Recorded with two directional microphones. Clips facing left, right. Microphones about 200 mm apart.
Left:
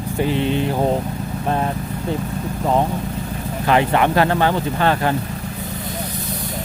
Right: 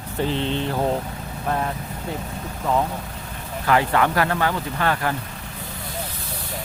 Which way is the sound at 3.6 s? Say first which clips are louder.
Left 3 dB; 25° left (ahead or behind).